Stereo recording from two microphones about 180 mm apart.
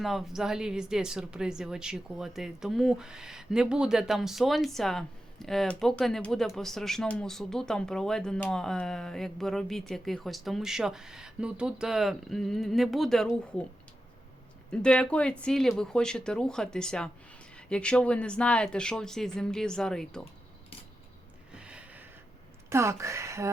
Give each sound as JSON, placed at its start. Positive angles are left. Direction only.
{"t": 0.0, "sound": "speech", "side_deg": 0}
{"t": 14.7, "sound": "speech", "side_deg": 5}
{"t": 21.5, "sound": "a sound", "side_deg": -5}
{"t": 22.7, "sound": "speech", "side_deg": -15}